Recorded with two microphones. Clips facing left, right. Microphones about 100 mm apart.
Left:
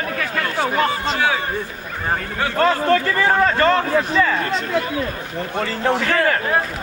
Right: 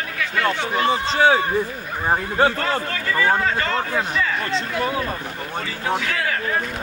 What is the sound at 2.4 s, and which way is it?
Speech, 30° right (ahead or behind).